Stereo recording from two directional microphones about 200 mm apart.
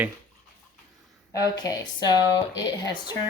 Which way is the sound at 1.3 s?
20° left (ahead or behind).